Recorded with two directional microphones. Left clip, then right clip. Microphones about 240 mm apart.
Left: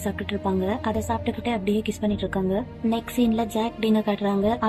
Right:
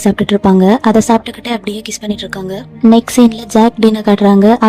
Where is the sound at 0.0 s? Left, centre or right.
Right.